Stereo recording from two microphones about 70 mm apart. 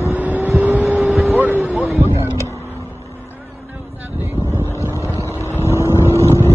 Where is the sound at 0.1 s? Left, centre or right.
Right.